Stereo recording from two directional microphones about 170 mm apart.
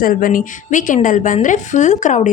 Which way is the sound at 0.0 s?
55° left (ahead or behind).